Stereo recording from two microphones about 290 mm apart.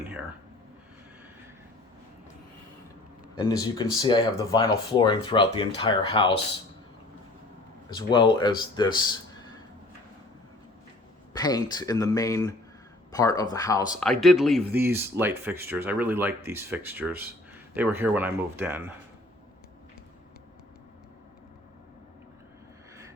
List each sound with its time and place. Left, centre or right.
3.3 s speech: centre
7.9 s speech: centre
11.3 s speech: centre
14.1 s speech: centre